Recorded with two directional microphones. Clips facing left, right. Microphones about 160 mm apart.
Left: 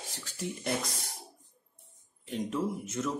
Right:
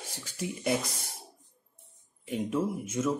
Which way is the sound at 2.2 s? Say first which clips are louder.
Right 2 dB; 10° right (ahead or behind).